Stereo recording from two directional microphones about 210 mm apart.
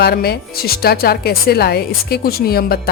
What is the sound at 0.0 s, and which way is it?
Speech, 50° left (ahead or behind).